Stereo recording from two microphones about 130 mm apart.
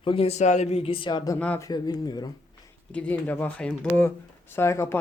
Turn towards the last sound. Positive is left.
turn(degrees=20)  # may be behind; listen again after turning